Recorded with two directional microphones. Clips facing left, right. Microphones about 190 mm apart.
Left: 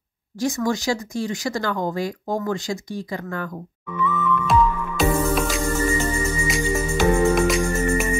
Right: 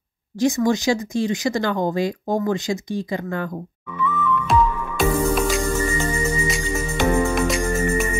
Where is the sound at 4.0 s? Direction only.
Centre (ahead or behind).